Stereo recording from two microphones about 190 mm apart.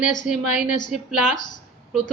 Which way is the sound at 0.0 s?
40° left (ahead or behind).